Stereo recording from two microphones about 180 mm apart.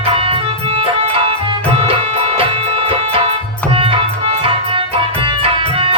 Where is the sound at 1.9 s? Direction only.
30° right (ahead or behind).